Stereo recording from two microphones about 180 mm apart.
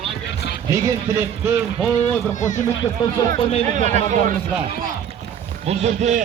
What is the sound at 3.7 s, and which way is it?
Speech, 40° right (ahead or behind).